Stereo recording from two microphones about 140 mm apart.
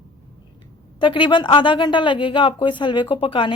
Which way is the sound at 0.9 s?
35° left (ahead or behind).